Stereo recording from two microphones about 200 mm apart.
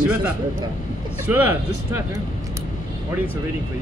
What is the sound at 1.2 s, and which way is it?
Speech, 10° right (ahead or behind).